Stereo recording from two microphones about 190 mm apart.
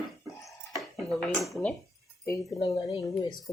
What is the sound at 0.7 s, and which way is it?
Speech, centre (ahead or behind).